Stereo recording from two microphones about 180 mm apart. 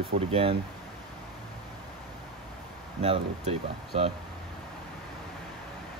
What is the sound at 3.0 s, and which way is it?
Speech, 35° right (ahead or behind).